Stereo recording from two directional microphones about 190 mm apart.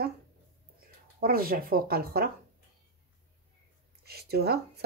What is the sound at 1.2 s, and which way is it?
Speech, 50° right (ahead or behind).